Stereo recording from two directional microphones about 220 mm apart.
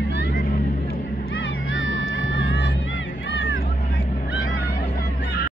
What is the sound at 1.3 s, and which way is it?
Music, 65° left (ahead or behind).